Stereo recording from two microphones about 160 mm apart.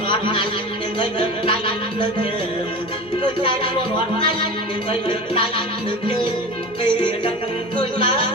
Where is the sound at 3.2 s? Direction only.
30° left (ahead or behind).